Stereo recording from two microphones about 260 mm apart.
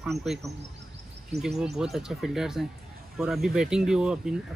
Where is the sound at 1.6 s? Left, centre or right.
Centre.